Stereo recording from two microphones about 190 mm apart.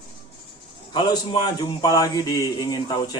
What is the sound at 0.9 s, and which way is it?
Speech, 25° left (ahead or behind).